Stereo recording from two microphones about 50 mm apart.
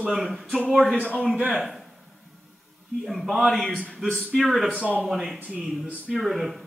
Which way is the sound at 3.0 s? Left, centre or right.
Centre.